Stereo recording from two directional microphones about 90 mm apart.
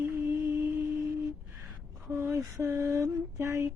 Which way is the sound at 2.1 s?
25° right (ahead or behind).